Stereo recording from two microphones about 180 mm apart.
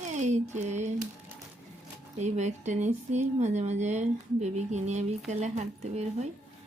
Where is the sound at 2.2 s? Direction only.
40° right (ahead or behind).